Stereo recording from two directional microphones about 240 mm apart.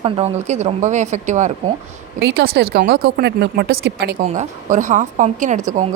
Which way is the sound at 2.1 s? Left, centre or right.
Right.